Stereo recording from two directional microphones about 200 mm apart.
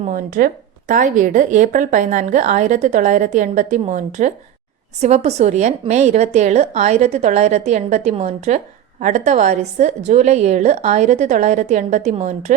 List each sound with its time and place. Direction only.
0.1 s speech: 45° right (ahead or behind)